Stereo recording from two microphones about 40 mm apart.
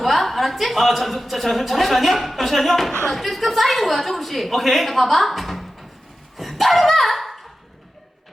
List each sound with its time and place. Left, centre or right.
0.0 s speech: centre
6.3 s dog: centre